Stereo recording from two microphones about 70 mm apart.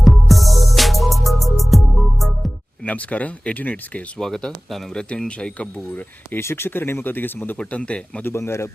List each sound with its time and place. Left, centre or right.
0.0 s music: centre
2.8 s speech: centre
4.2 s speech: centre
6.4 s speech: left
7.5 s speech: centre
8.2 s speech: left